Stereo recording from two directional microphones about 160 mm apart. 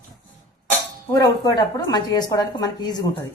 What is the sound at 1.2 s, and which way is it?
A woman's voice, 20° left (ahead or behind).